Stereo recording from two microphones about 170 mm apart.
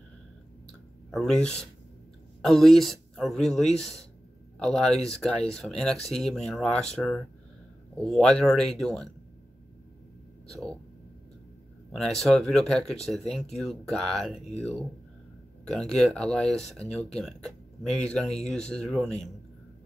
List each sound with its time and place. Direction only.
0.7 s a sound: 5° left (ahead or behind)
2.4 s speech: centre (ahead or behind)
11.9 s speech: centre (ahead or behind)
14.4 s speech: 40° left (ahead or behind)
15.6 s speech: 5° left (ahead or behind)